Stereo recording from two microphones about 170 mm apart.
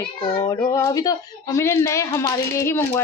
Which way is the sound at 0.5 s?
20° left (ahead or behind).